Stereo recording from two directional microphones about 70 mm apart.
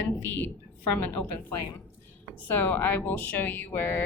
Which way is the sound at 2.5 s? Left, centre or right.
Left.